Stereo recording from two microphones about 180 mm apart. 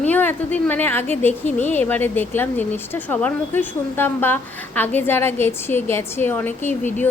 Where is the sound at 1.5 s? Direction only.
40° left (ahead or behind).